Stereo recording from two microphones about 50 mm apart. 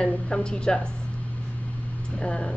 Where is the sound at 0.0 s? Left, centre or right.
Centre.